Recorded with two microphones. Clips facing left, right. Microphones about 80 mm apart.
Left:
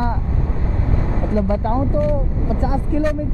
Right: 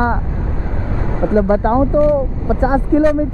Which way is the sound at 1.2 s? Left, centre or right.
Right.